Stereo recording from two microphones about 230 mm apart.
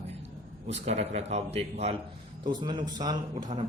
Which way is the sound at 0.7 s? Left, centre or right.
Right.